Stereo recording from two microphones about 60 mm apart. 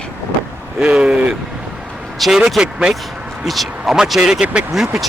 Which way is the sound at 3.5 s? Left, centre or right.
Centre.